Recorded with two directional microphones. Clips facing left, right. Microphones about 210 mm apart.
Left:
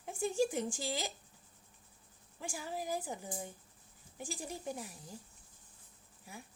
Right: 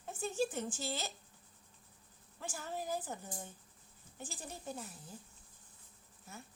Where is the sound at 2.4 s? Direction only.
10° left (ahead or behind).